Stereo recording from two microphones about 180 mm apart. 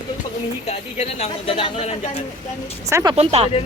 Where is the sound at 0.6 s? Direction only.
35° left (ahead or behind).